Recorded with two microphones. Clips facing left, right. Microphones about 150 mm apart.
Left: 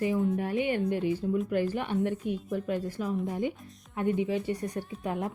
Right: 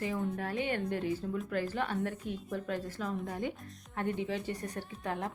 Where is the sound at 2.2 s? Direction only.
55° left (ahead or behind).